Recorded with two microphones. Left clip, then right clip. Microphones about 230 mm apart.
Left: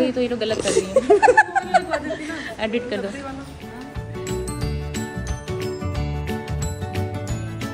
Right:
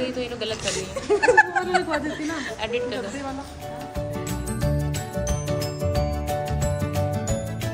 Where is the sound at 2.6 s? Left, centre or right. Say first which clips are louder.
Left 4 dB; left.